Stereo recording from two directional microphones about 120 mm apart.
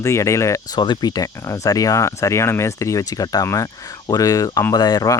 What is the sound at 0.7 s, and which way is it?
Speech, 40° left (ahead or behind).